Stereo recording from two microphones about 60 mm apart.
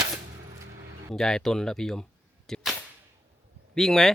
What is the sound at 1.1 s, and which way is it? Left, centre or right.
Speech, centre.